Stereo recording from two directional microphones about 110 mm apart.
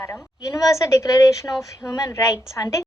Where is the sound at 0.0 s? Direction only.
25° left (ahead or behind).